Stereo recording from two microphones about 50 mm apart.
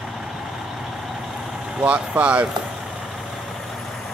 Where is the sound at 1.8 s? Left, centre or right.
Right.